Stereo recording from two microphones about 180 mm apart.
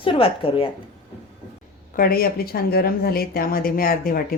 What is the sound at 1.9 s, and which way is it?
Speech, 55° left (ahead or behind).